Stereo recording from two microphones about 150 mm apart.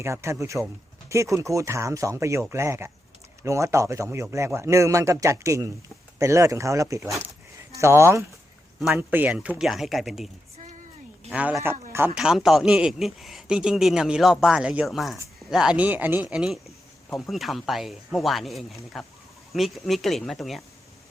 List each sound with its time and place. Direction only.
0.0 s speech: 20° right (ahead or behind); by 10.2 s centre (ahead or behind)
11.3 s speech: 5° right (ahead or behind)
12.1 s a man's voice: 5° right (ahead or behind)